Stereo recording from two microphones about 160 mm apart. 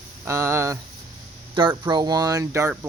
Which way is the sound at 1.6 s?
30° right (ahead or behind).